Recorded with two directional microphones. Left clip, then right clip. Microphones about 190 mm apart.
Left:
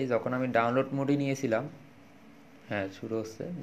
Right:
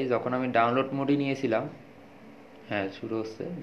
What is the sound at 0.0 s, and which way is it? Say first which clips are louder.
Speech: right 2 dB; 55° left (ahead or behind).